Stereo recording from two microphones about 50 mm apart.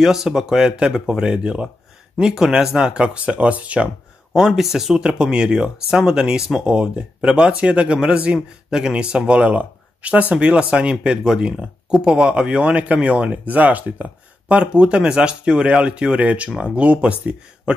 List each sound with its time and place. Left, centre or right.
0.0 s speech: centre; by 3.9 s right
4.5 s speech: centre
5.0 s speech: centre